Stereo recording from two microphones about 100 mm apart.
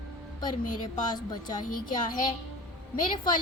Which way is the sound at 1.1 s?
45° left (ahead or behind).